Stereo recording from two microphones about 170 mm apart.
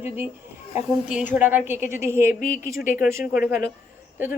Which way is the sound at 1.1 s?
10° right (ahead or behind).